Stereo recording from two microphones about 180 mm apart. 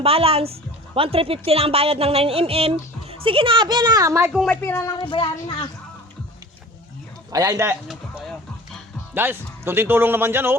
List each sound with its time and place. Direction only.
0.0 s speech: 30° right (ahead or behind)
4.4 s speech: 10° left (ahead or behind)
5.0 s speech: 30° left (ahead or behind)
7.3 s a man's voice: 20° right (ahead or behind)
7.9 s a sound: centre (ahead or behind)
9.1 s speech: 10° right (ahead or behind)